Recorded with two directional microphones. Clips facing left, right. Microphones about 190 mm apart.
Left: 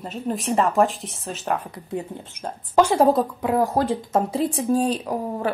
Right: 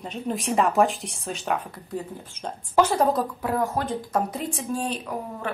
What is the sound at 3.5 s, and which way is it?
Speech, 35° left (ahead or behind).